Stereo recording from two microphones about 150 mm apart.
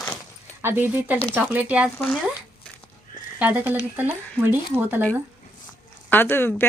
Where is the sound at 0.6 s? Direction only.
15° right (ahead or behind).